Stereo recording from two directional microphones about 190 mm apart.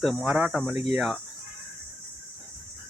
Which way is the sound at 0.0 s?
Centre (ahead or behind).